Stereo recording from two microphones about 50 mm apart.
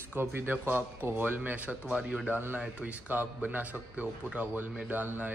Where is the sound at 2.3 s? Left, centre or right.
Right.